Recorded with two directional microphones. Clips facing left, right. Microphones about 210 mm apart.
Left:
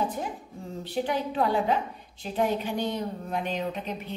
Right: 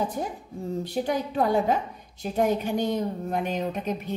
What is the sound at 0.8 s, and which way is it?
A woman's voice, 40° right (ahead or behind).